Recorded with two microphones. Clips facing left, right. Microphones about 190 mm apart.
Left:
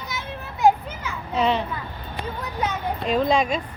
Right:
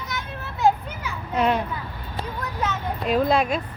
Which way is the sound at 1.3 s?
10° right (ahead or behind).